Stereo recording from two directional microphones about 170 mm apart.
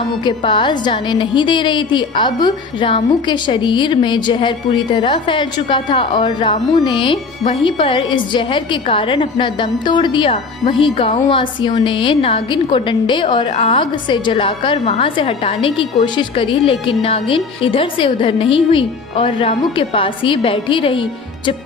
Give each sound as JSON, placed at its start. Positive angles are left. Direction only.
{"t": 0.3, "sound": "a woman's voice", "side_deg": 30}